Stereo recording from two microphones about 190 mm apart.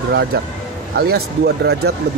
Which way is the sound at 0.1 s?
65° right (ahead or behind).